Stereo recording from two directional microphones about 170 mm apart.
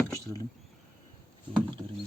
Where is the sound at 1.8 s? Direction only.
20° right (ahead or behind).